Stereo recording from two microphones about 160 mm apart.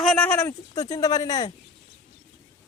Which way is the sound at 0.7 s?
25° left (ahead or behind).